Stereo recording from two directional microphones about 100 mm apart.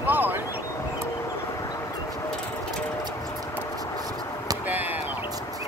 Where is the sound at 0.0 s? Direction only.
20° right (ahead or behind).